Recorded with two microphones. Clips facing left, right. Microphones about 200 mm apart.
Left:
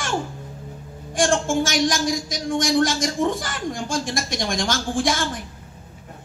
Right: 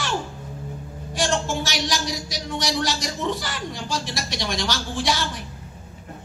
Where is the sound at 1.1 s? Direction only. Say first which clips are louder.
Left 4 dB; 50° left (ahead or behind).